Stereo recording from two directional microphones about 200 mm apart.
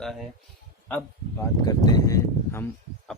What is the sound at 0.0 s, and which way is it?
A man's voice, centre (ahead or behind).